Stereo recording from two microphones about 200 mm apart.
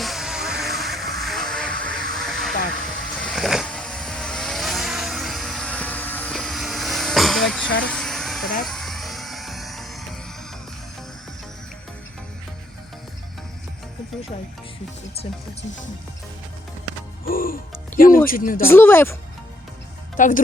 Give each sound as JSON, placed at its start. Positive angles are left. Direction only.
{"t": 0.0, "sound": "music", "side_deg": 0}
{"t": 3.2, "sound": "vehicle", "side_deg": 0}
{"t": 7.9, "sound": "a sound", "side_deg": 0}
{"t": 8.6, "sound": "music", "side_deg": 0}
{"t": 17.2, "sound": "music", "side_deg": 45}
{"t": 18.3, "sound": "speech", "side_deg": 45}
{"t": 18.6, "sound": "speech", "side_deg": 10}
{"t": 20.1, "sound": "speech", "side_deg": 40}